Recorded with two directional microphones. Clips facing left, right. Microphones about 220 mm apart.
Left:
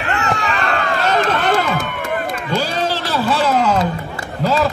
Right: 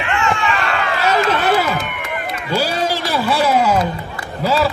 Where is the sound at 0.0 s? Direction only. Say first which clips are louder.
Right 1 dB; 40° left (ahead or behind).